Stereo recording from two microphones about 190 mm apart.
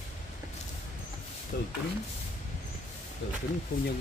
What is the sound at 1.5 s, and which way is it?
Speech, 60° left (ahead or behind).